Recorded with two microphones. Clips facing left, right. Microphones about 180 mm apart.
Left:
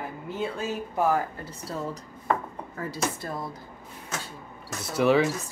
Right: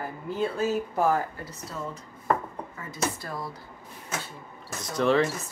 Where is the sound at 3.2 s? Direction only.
25° left (ahead or behind).